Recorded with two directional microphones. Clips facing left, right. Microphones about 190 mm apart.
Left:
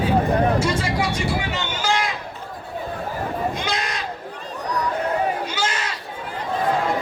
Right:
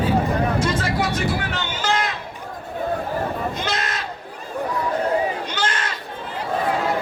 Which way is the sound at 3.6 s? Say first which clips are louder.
Even; centre (ahead or behind).